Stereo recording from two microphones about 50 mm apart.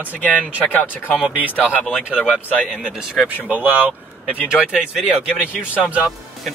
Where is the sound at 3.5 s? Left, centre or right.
Right.